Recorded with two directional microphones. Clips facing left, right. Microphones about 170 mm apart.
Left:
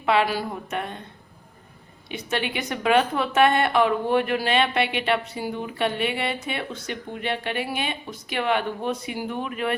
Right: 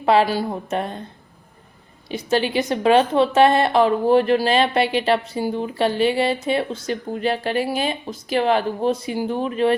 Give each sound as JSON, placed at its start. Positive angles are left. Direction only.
{"t": 0.0, "sound": "a woman's voice", "side_deg": -35}
{"t": 2.0, "sound": "a woman's voice", "side_deg": -35}